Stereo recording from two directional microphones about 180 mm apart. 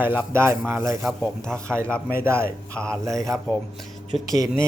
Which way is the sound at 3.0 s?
15° right (ahead or behind).